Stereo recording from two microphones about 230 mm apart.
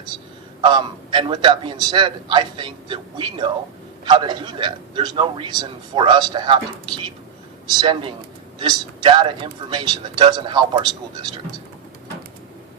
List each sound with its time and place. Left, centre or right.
0.6 s a man's voice: centre